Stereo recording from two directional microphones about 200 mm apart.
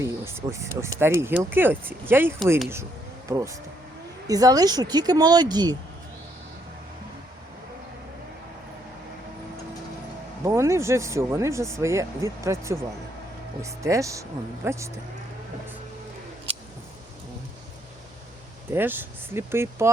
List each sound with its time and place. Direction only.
0.0 s speech: 15° right (ahead or behind)
10.4 s speech: 15° right (ahead or behind)
18.7 s speech: 10° right (ahead or behind)